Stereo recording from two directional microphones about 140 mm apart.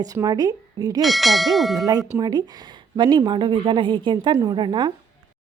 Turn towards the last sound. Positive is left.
turn(degrees=-35)  # may be behind; listen again after turning